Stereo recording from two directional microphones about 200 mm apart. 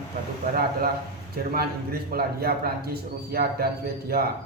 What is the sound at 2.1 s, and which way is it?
A man's voice, 50° right (ahead or behind).